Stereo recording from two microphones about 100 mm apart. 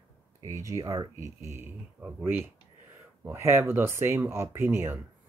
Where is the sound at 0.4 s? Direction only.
30° right (ahead or behind).